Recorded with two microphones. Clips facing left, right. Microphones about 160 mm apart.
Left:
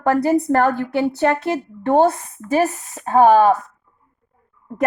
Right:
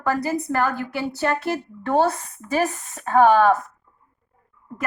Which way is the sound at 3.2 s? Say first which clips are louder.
Left 3 dB; 35° left (ahead or behind).